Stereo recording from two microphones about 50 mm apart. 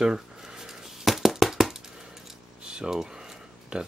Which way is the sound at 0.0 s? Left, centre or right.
Centre.